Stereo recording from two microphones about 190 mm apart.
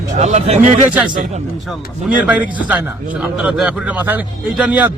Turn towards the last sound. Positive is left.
turn(degrees=-5)  # may be behind; listen again after turning